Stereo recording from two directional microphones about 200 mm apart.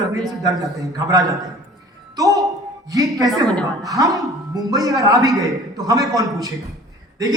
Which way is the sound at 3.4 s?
5° left (ahead or behind).